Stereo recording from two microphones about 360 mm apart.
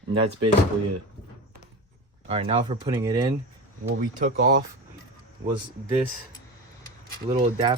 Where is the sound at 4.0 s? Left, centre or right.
Right.